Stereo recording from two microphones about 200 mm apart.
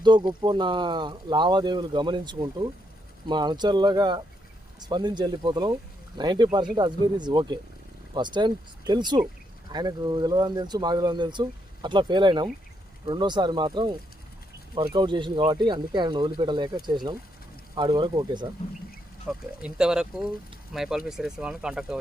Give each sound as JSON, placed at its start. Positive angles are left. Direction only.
{"t": 0.0, "sound": "speech", "side_deg": -20}
{"t": 14.9, "sound": "speech", "side_deg": -25}
{"t": 19.3, "sound": "speech", "side_deg": -5}